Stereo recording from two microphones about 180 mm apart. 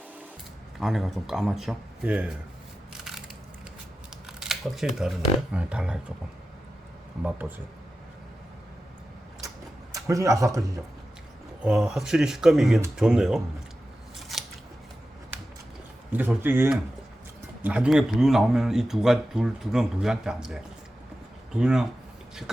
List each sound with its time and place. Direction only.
0.8 s speech: centre (ahead or behind)
4.3 s a sound: 5° right (ahead or behind)
5.5 s speech: 5° right (ahead or behind)
7.3 s speech: 10° right (ahead or behind)
9.9 s speech: 20° right (ahead or behind)
11.6 s speech: 5° right (ahead or behind)
14.3 s scissors: centre (ahead or behind)
16.1 s speech: 10° right (ahead or behind)